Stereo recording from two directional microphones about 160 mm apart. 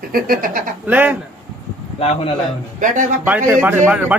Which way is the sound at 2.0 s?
40° left (ahead or behind).